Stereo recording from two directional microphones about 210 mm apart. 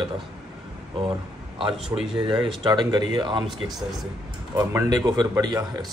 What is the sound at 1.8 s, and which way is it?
Speech, centre (ahead or behind).